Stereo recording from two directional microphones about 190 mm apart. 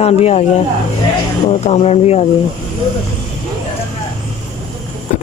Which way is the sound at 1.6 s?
35° left (ahead or behind).